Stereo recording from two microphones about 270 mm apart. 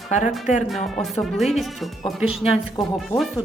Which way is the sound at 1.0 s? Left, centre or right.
Centre.